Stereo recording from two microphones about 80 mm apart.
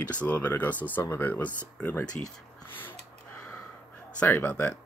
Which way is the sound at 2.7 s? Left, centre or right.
Left.